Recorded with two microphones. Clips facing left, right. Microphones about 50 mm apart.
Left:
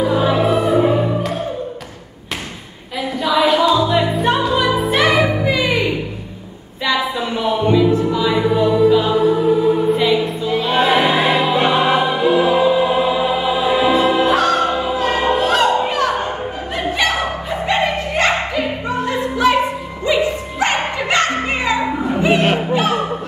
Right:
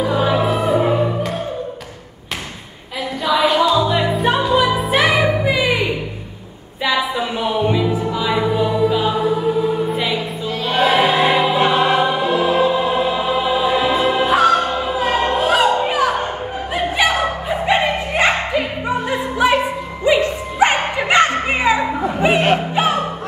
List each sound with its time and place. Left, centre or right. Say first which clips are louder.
0.0 s music: left 1 dB; centre
3.2 s music: left 1 dB; centre
10.6 s choir: even; centre
13.9 s music: left 1 dB; centre
16.7 s a sound: right 1 dB; centre
19.3 s music: left 1 dB; centre
22.4 s music: even; centre